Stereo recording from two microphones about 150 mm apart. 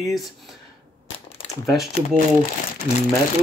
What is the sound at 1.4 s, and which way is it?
Crumpling, 35° left (ahead or behind).